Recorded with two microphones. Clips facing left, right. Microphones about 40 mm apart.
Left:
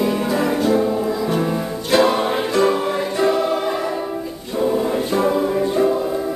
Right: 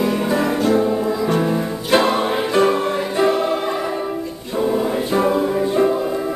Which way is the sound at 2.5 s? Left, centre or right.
Centre.